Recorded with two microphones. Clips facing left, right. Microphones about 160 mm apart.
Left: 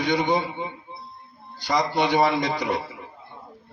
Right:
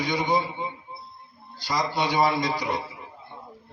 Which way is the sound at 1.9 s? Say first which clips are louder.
Left 2 dB; 60° left (ahead or behind).